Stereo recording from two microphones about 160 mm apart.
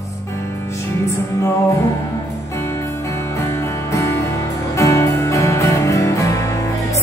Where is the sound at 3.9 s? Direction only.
20° left (ahead or behind).